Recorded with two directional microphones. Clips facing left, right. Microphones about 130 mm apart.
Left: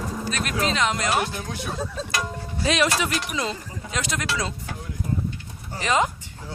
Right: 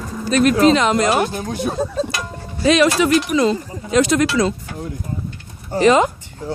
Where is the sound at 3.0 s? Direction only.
65° right (ahead or behind).